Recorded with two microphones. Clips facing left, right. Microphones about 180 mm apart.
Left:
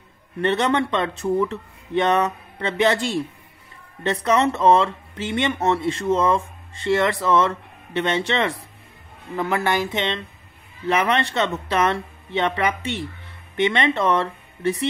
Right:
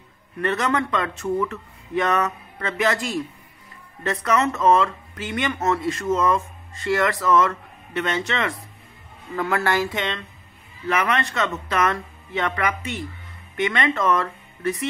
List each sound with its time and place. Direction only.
0.4 s speech: 30° left (ahead or behind)
9.3 s speech: 20° left (ahead or behind)